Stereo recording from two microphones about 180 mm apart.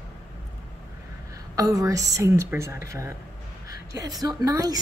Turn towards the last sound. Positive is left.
turn(degrees=-20)  # may be behind; listen again after turning